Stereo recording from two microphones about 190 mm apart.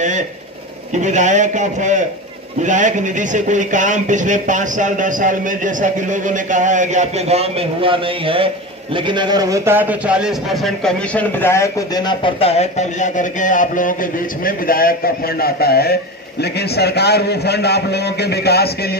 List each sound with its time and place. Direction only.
0.9 s a man's voice: 40° right (ahead or behind); by 18.7 s 60° left (ahead or behind)